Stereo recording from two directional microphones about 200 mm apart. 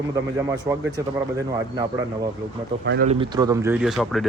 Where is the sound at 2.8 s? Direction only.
55° right (ahead or behind).